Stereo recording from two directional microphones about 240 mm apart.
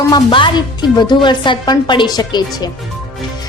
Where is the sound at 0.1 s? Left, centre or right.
Centre.